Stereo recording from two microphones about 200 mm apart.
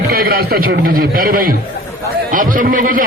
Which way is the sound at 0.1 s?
50° right (ahead or behind).